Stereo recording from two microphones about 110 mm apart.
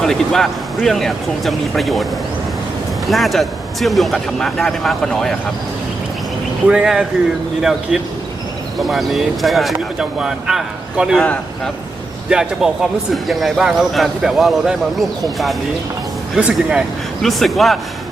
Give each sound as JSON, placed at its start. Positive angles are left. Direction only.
{"t": 0.0, "sound": "a man's voice", "side_deg": 5}
{"t": 3.1, "sound": "a man's voice", "side_deg": 0}
{"t": 6.7, "sound": "a man's voice", "side_deg": -5}
{"t": 11.2, "sound": "speech", "side_deg": 10}
{"t": 12.3, "sound": "a man's voice", "side_deg": -5}
{"t": 16.3, "sound": "a man's voice", "side_deg": -10}